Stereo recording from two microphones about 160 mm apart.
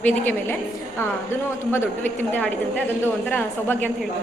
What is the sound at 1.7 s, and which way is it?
A woman's voice, 15° left (ahead or behind).